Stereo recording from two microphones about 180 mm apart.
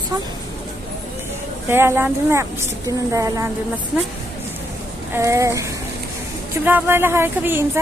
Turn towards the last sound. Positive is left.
turn(degrees=-10)  # may be behind; listen again after turning